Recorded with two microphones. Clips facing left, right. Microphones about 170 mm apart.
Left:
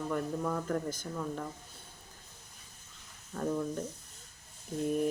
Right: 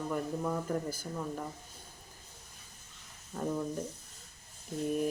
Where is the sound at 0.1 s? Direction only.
15° right (ahead or behind).